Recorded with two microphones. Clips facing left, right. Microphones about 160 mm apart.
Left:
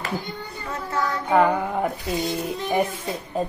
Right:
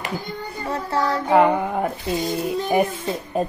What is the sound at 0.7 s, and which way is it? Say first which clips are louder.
Child singing: right 4 dB; 35° right (ahead or behind).